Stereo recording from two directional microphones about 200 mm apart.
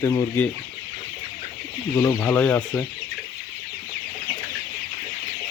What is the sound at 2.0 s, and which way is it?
Speech, 10° left (ahead or behind).